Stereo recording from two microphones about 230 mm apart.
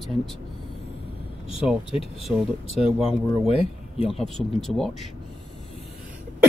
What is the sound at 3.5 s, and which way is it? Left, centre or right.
Speech, left.